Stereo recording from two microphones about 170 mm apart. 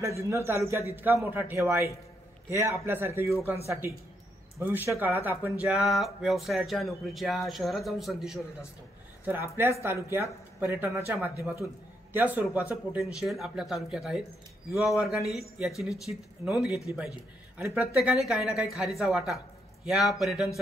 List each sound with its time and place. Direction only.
0.0 s a man's voice: 15° right (ahead or behind); by 8.4 s centre (ahead or behind)
9.2 s a man's voice: 10° right (ahead or behind)